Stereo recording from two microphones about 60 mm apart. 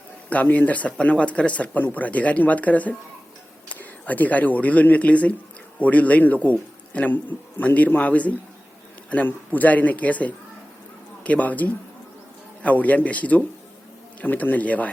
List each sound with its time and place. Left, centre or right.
0.4 s a man's voice: left